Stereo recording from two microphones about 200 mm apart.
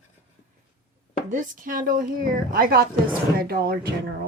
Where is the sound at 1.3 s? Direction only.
40° right (ahead or behind).